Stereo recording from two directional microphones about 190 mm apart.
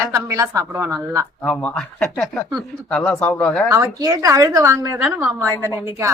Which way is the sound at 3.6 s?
15° right (ahead or behind).